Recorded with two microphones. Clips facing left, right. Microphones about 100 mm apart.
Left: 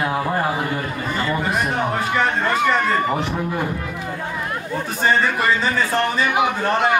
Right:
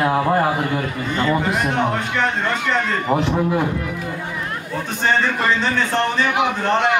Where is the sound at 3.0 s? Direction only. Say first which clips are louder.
Right 4 dB; 20° right (ahead or behind).